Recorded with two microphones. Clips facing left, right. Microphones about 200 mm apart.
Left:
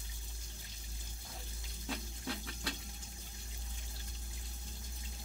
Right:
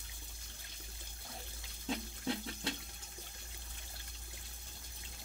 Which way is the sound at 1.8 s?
25° right (ahead or behind).